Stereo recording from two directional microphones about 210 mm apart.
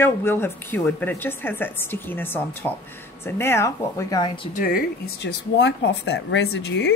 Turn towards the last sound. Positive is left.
turn(degrees=55)  # may be behind; listen again after turning